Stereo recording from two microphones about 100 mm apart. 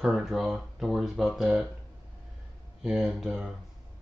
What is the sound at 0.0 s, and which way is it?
Speech, 5° right (ahead or behind).